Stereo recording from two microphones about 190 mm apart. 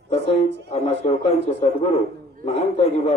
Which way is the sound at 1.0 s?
35° left (ahead or behind).